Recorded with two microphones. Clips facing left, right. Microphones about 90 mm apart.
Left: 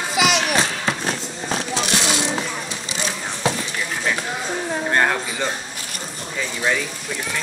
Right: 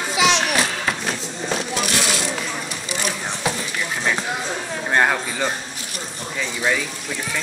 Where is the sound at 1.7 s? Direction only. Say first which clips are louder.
Left 1 dB; 25° left (ahead or behind).